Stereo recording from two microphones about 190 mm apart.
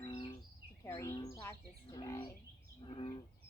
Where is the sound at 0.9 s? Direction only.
15° left (ahead or behind).